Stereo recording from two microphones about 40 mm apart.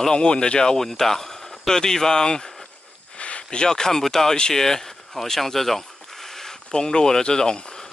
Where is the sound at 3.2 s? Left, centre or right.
Left.